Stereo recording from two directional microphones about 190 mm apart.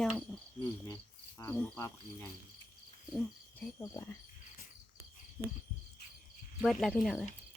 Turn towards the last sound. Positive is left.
turn(degrees=0)  # may be behind; listen again after turning